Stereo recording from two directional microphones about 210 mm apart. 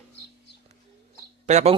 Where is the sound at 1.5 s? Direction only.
35° right (ahead or behind).